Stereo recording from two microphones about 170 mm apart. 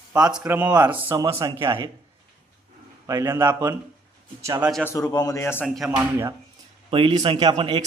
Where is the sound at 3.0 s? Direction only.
15° right (ahead or behind).